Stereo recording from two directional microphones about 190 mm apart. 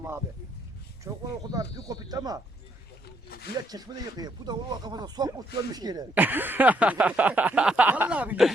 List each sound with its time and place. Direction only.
1.0 s speech: 15° right (ahead or behind)
3.2 s speech: 55° left (ahead or behind)
3.7 s speech: 20° right (ahead or behind)
6.1 s a sound: 10° right (ahead or behind)